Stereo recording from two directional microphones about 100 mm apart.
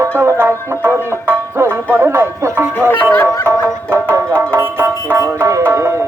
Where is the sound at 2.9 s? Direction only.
25° left (ahead or behind).